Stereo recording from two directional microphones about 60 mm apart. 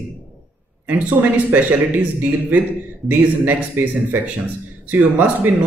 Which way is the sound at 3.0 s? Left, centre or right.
Right.